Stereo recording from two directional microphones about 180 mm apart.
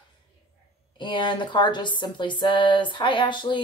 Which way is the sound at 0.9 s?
25° left (ahead or behind).